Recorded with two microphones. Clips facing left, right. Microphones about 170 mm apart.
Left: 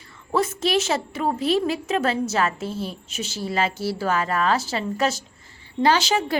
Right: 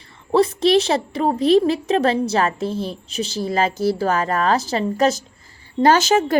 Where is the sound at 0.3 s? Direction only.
35° right (ahead or behind).